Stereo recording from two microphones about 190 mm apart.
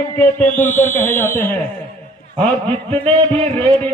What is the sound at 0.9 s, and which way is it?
Speech, 10° left (ahead or behind).